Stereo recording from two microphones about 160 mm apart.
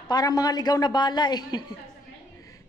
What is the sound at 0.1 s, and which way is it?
A woman's voice, 25° left (ahead or behind).